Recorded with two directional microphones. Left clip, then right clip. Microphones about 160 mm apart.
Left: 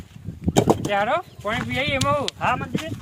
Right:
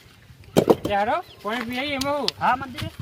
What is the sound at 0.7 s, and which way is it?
Speech, 15° left (ahead or behind).